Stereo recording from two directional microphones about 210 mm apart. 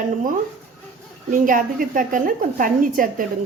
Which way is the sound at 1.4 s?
40° right (ahead or behind).